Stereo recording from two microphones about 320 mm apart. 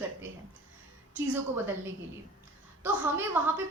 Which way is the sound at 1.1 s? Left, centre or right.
Centre.